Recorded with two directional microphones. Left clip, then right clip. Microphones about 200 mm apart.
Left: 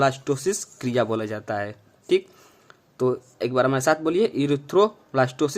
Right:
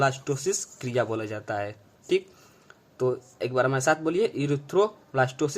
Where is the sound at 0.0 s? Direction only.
25° left (ahead or behind).